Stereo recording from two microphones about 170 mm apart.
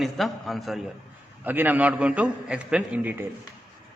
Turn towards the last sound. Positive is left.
turn(degrees=-10)  # may be behind; listen again after turning